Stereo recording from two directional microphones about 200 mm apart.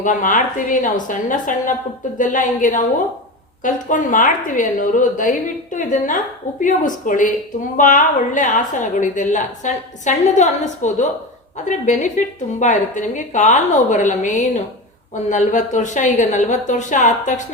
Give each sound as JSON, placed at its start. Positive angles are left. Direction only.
{"t": 0.0, "sound": "speech", "side_deg": 40}